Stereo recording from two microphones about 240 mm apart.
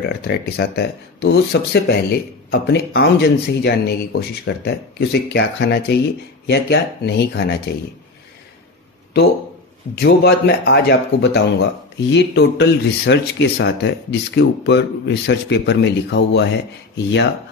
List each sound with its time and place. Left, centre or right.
0.2 s speech: left
9.9 s speech: left